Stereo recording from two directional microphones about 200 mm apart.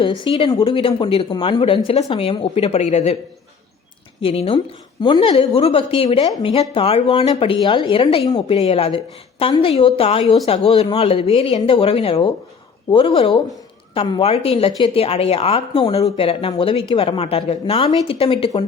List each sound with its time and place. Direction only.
0.3 s speech: 25° left (ahead or behind)
4.2 s speech: 30° left (ahead or behind)